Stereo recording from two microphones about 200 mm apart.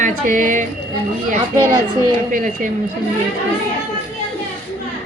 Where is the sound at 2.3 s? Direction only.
40° right (ahead or behind).